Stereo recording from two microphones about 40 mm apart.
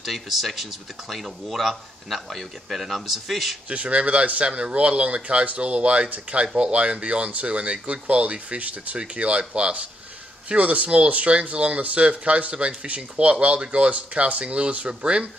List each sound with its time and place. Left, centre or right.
0.0 s speech: centre
3.6 s speech: right
6.0 s speech: right
6.4 s speech: right